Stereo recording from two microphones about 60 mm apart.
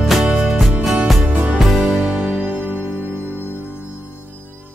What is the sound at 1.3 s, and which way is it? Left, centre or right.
Music, right.